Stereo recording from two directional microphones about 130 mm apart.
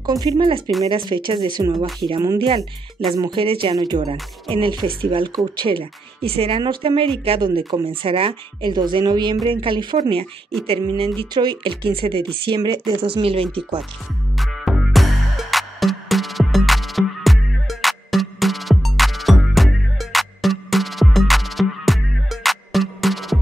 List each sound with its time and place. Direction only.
0.0 s speech: 30° right (ahead or behind)
4.0 s speech: 45° right (ahead or behind)
6.6 s speech: 35° right (ahead or behind)
14.3 s music: centre (ahead or behind)